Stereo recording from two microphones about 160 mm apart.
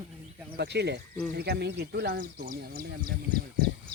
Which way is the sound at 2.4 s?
60° right (ahead or behind).